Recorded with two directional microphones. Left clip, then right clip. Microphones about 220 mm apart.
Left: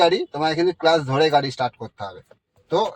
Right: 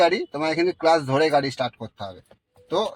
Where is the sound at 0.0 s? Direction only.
30° right (ahead or behind).